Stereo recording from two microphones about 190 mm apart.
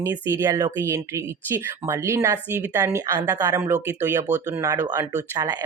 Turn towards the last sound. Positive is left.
turn(degrees=-20)  # may be behind; listen again after turning